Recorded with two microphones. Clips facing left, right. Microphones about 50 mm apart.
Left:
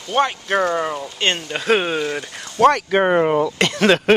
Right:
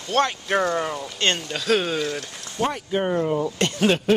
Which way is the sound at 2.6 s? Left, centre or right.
Left.